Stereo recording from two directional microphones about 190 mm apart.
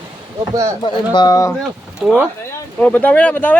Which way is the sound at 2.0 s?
10° right (ahead or behind).